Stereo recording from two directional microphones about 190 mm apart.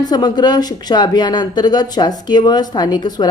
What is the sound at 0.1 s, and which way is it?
Speech, 20° left (ahead or behind).